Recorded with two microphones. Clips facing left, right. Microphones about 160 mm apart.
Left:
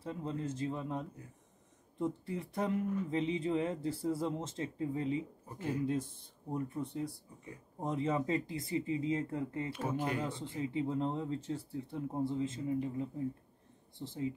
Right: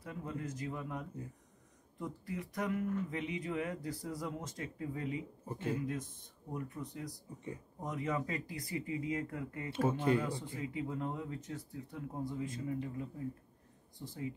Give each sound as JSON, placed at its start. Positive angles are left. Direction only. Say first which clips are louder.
{"t": 0.0, "sound": "speech", "louder": "left 4 dB", "side_deg": 25}
{"t": 9.7, "sound": "speech", "louder": "right 8 dB", "side_deg": -25}
{"t": 10.1, "sound": "speech", "louder": "right 2 dB", "side_deg": 25}